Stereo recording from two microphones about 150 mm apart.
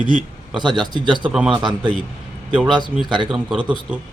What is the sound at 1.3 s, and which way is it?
Speech, 5° right (ahead or behind).